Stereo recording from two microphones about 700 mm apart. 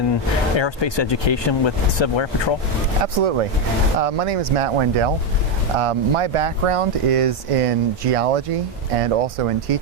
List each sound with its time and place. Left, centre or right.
0.1 s speech: left
3.0 s speech: right